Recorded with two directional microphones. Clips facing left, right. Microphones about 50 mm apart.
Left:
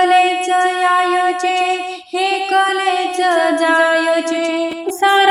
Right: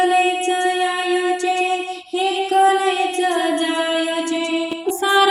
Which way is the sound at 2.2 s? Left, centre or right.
Left.